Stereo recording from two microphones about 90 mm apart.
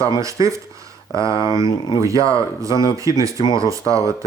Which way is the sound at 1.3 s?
60° left (ahead or behind).